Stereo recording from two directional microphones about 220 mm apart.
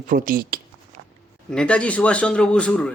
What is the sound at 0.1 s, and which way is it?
Speech, 40° right (ahead or behind).